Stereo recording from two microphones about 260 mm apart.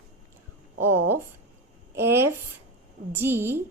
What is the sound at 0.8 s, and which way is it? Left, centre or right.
Speech, right.